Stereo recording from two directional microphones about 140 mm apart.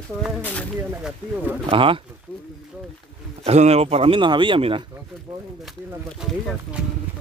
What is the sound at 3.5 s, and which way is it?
Speech, 50° right (ahead or behind).